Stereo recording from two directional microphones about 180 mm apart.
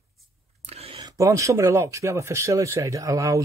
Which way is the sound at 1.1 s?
15° right (ahead or behind).